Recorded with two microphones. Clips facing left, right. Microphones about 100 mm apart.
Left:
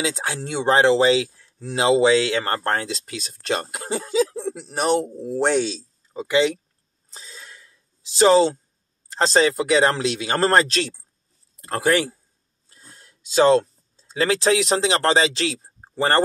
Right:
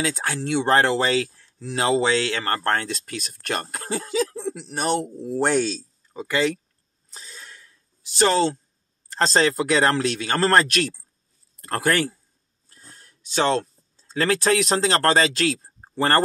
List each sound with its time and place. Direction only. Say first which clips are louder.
0.0 s speech: even; 15° left (ahead or behind)
4.4 s speech: left 1 dB; 5° left (ahead or behind)
4.6 s speech: left 4 dB; 25° left (ahead or behind)
5.7 s a sound: right 1 dB; 20° left (ahead or behind)
8.2 s speech: left 5 dB; 10° left (ahead or behind)
12.6 s a sound: even; 20° left (ahead or behind)
14.0 s speech: left 1 dB; 10° left (ahead or behind)